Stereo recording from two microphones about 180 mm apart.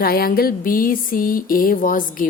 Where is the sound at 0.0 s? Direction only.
55° left (ahead or behind).